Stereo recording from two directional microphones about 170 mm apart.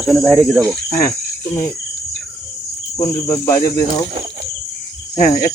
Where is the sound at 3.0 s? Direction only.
20° left (ahead or behind).